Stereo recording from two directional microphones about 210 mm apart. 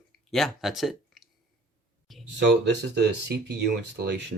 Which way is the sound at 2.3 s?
55° right (ahead or behind).